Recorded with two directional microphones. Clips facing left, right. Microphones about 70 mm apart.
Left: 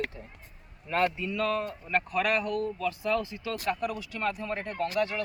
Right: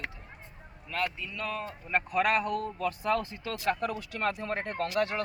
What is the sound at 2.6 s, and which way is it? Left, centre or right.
Speech, right.